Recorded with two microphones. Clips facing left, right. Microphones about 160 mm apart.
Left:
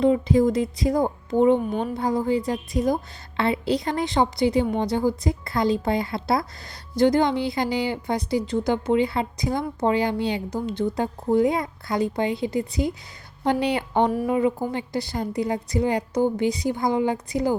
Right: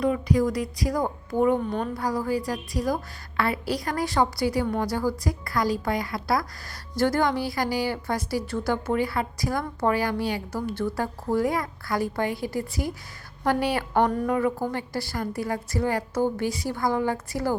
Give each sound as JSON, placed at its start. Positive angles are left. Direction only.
{"t": 0.0, "sound": "a woman's voice", "side_deg": 25}